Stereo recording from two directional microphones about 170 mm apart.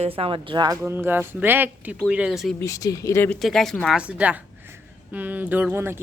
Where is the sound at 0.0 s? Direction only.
35° right (ahead or behind).